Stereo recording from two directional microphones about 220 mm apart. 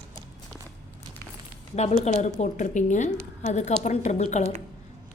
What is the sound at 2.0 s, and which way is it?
A woman's voice, 30° left (ahead or behind).